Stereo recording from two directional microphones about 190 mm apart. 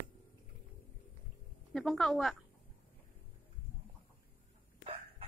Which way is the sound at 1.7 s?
Centre (ahead or behind).